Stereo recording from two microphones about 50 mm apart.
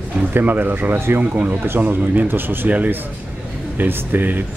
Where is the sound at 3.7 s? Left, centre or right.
Right.